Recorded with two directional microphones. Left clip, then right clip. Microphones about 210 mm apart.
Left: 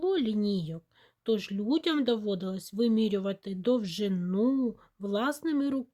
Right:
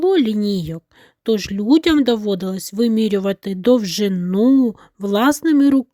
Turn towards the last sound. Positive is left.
turn(degrees=-40)  # may be behind; listen again after turning